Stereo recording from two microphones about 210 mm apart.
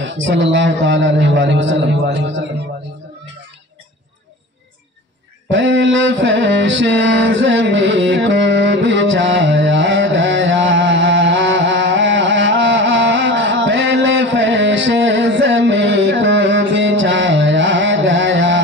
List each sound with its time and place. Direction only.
0.0 s a man's voice: 60° right (ahead or behind)
5.5 s mantra: 60° right (ahead or behind)
12.5 s a sound: 60° right (ahead or behind)